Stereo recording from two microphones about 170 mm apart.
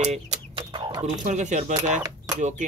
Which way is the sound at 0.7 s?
25° right (ahead or behind).